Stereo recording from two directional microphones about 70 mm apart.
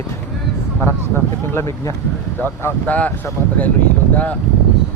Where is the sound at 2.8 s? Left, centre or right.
Left.